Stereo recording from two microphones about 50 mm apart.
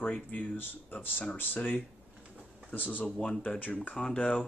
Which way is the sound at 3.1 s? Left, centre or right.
Centre.